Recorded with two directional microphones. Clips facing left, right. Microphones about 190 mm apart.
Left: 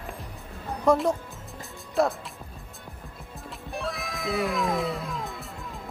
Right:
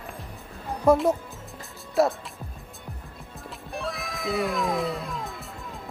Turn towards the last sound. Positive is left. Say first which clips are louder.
# even
turn(degrees=0)  # may be behind; listen again after turning